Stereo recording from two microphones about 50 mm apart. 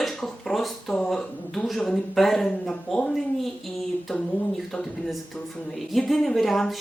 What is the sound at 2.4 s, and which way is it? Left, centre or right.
Speech, centre.